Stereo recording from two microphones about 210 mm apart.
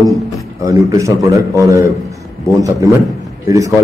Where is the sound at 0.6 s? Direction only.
15° right (ahead or behind).